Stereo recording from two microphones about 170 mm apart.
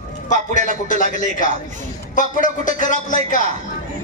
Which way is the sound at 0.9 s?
50° left (ahead or behind).